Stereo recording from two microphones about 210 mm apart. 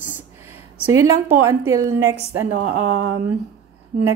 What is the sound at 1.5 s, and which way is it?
Speech, 15° right (ahead or behind).